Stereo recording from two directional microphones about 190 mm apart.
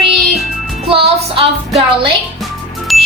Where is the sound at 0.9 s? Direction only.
30° right (ahead or behind).